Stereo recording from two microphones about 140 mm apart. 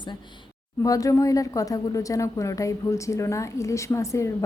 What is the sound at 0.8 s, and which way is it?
A woman's voice, 25° left (ahead or behind).